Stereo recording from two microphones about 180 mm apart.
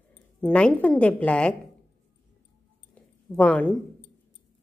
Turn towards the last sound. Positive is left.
turn(degrees=5)  # may be behind; listen again after turning